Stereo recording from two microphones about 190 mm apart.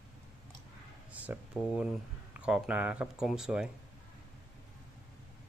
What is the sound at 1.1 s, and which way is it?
Speech, 10° right (ahead or behind).